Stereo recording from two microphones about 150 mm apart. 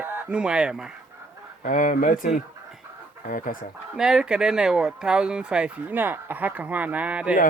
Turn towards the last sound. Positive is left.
turn(degrees=-10)  # may be behind; listen again after turning